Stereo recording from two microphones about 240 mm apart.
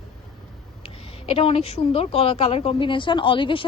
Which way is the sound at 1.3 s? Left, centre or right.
Left.